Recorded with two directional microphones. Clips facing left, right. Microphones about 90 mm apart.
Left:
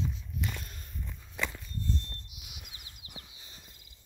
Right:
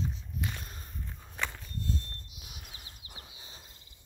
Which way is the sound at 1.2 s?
70° right (ahead or behind).